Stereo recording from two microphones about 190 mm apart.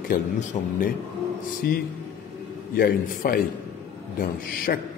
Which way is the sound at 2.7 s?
50° left (ahead or behind).